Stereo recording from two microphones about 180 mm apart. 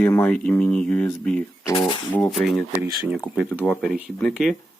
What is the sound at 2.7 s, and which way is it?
Speech, 10° right (ahead or behind).